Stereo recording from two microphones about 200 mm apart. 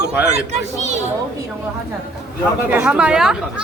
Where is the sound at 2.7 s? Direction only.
5° right (ahead or behind).